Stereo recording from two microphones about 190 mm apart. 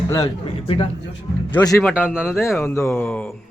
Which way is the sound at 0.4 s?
30° left (ahead or behind).